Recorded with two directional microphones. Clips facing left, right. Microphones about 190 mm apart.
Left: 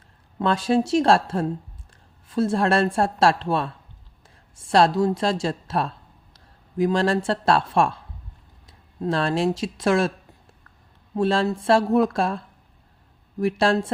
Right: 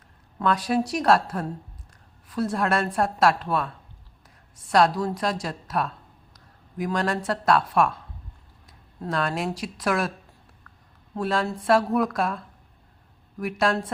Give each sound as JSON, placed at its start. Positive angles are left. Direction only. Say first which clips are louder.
{"t": 0.3, "sound": "speech", "louder": "left 3 dB", "side_deg": 25}
{"t": 11.1, "sound": "speech", "louder": "left 5 dB", "side_deg": 25}
{"t": 13.4, "sound": "speech", "louder": "left 4 dB", "side_deg": 30}